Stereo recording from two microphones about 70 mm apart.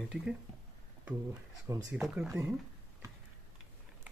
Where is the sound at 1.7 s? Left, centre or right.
Right.